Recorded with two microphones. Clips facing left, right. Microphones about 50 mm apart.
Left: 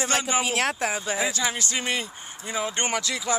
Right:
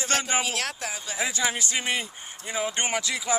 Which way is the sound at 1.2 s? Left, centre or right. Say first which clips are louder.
Right 4 dB; centre.